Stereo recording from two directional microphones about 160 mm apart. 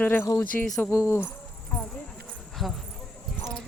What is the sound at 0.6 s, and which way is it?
Speech, 5° left (ahead or behind).